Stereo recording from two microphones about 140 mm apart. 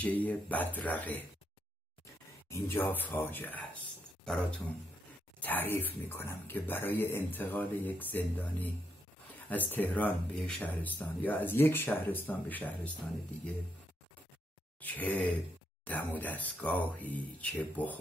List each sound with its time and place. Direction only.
0.0 s speech: 10° left (ahead or behind)
2.5 s speech: 15° left (ahead or behind)
14.8 s speech: 10° left (ahead or behind)